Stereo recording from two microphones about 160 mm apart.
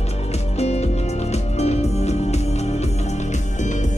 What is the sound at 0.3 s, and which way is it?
Music, 40° left (ahead or behind).